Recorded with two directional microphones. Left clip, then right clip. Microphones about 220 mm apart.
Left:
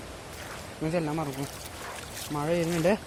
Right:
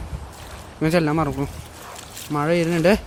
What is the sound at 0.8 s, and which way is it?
Speech, 30° right (ahead or behind).